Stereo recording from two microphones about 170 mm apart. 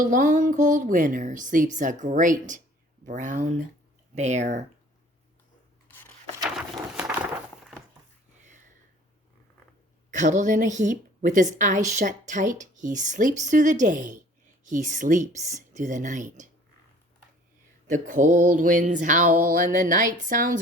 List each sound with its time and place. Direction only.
0.0 s a woman's voice: 50° right (ahead or behind)
10.1 s a woman's voice: 45° right (ahead or behind)
17.9 s a woman's voice: 50° right (ahead or behind)